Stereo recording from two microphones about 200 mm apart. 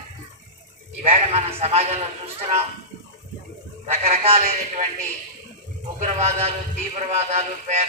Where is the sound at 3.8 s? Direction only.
30° right (ahead or behind).